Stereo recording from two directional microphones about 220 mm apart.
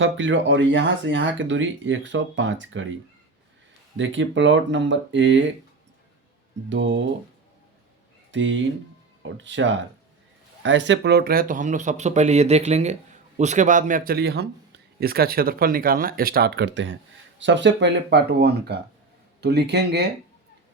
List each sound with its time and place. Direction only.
0.0 s speech: 55° right (ahead or behind)
3.9 s speech: 55° right (ahead or behind)
6.7 s speech: 55° right (ahead or behind)
8.3 s speech: 55° right (ahead or behind)